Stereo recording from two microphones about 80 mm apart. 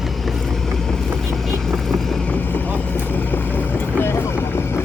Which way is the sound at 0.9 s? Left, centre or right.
Centre.